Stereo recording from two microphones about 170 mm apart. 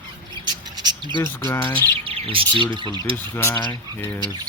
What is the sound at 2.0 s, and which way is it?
Bird, 30° right (ahead or behind).